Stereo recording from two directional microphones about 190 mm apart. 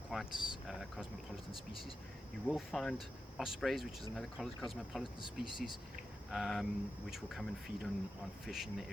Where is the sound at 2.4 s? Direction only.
Centre (ahead or behind).